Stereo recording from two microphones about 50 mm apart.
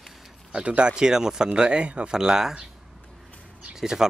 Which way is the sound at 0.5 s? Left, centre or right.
Right.